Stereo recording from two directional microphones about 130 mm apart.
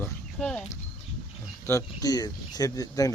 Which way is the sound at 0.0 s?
5° left (ahead or behind).